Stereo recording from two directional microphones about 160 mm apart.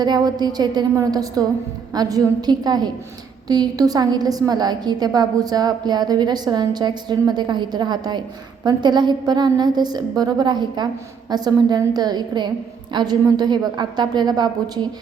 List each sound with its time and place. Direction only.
0.0 s a woman's voice: 25° right (ahead or behind)